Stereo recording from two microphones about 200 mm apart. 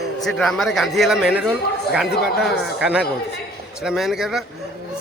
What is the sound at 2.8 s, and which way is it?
A man's voice, 5° right (ahead or behind).